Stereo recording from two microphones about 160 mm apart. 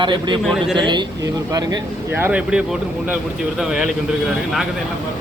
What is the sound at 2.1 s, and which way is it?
A man's voice, 10° right (ahead or behind).